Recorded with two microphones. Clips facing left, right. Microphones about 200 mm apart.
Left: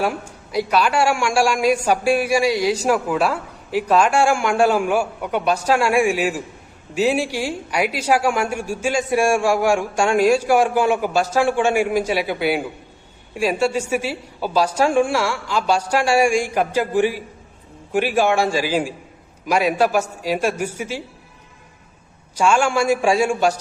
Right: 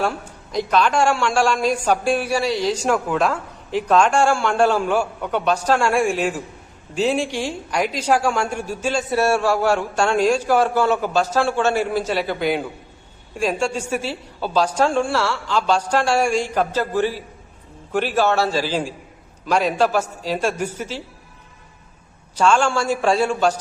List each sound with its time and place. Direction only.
0.0 s a woman's voice: 10° left (ahead or behind)
22.4 s a woman's voice: 10° left (ahead or behind)